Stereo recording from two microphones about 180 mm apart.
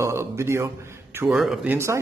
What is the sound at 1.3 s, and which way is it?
Speech, centre (ahead or behind).